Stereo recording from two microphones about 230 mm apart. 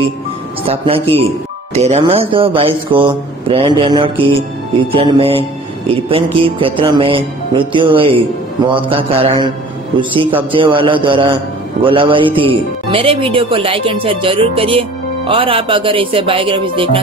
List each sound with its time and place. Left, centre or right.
0.7 s speech: right
6.6 s speech: right